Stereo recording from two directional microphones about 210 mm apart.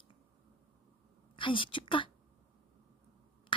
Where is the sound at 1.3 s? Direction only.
25° left (ahead or behind).